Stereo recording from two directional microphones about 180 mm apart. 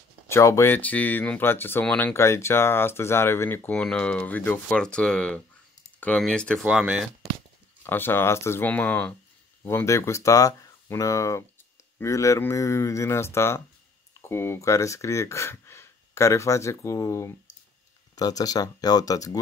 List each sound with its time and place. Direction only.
0.3 s speech: 15° left (ahead or behind); by 7.1 s 5° right (ahead or behind)
7.8 s speech: 10° left (ahead or behind)